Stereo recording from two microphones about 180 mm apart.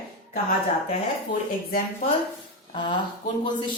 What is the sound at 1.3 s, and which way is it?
Speech, 50° left (ahead or behind).